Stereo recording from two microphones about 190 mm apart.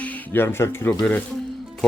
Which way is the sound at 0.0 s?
10° left (ahead or behind).